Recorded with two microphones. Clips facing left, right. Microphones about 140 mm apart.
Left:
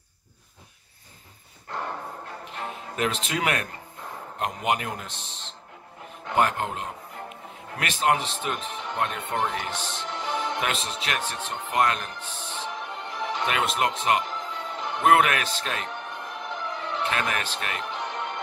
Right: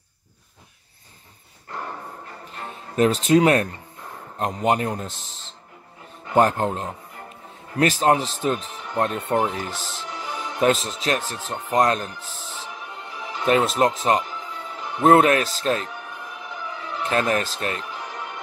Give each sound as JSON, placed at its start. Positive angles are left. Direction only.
{"t": 1.7, "sound": "music", "side_deg": 0}
{"t": 3.0, "sound": "speech", "side_deg": -35}
{"t": 6.3, "sound": "speech", "side_deg": -35}
{"t": 9.4, "sound": "music", "side_deg": -5}
{"t": 10.6, "sound": "speech", "side_deg": -35}
{"t": 12.1, "sound": "music", "side_deg": -5}
{"t": 13.5, "sound": "speech", "side_deg": -35}
{"t": 14.2, "sound": "music", "side_deg": 0}
{"t": 15.0, "sound": "speech", "side_deg": -30}
{"t": 15.9, "sound": "music", "side_deg": 0}
{"t": 17.1, "sound": "speech", "side_deg": -35}
{"t": 17.8, "sound": "music", "side_deg": -5}